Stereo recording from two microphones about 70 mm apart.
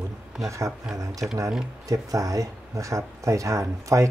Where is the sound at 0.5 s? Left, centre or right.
Right.